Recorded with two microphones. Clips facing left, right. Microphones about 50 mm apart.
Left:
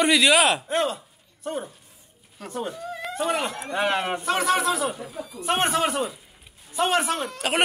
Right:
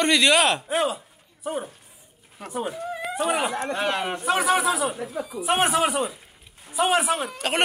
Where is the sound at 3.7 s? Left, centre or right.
Centre.